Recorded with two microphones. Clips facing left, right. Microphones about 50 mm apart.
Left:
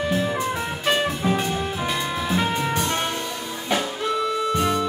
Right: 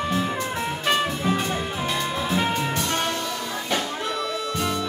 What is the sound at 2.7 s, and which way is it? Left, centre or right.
Music, left.